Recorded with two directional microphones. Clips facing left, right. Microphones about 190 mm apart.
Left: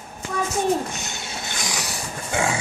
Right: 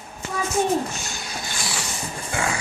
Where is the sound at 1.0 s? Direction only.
20° left (ahead or behind).